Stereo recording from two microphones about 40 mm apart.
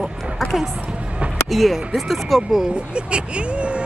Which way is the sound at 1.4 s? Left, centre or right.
Centre.